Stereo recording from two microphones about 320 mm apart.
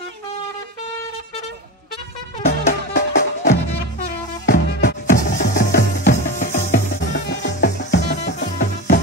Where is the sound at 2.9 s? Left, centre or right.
Left.